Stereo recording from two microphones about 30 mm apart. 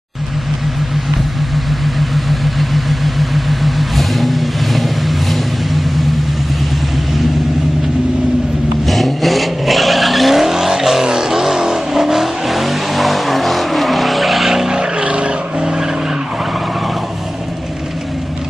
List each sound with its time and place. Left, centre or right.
2.0 s vehicle: centre
8.8 s vehicle: centre
14.7 s vehicle: right
15.0 s vehicle: right